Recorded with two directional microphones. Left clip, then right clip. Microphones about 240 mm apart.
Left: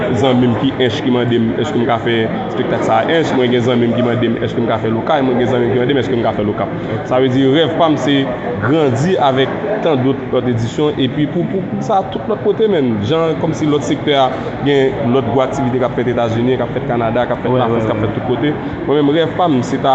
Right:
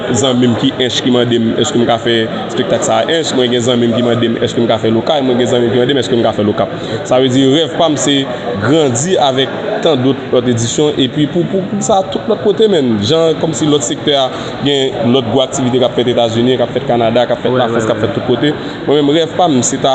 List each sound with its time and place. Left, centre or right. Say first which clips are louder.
0.1 s a man's voice: right 4 dB; right
12.5 s a man's voice: right 3 dB; right
18.4 s a man's voice: right 3 dB; right